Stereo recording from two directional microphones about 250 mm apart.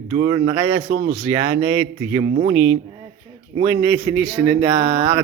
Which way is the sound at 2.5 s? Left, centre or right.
Right.